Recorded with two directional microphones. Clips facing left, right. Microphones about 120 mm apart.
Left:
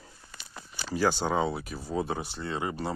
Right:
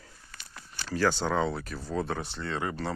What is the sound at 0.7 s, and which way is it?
Speech, 10° left (ahead or behind).